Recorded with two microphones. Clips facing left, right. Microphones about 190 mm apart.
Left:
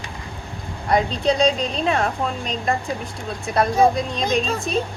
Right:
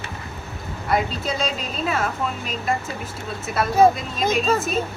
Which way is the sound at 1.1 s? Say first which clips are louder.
Left 7 dB; 5° right (ahead or behind).